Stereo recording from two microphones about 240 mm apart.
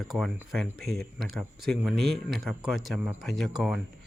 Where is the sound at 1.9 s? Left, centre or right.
Right.